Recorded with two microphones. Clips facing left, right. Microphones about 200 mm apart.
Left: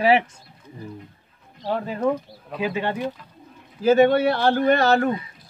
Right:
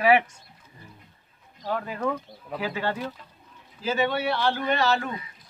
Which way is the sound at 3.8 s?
50° left (ahead or behind).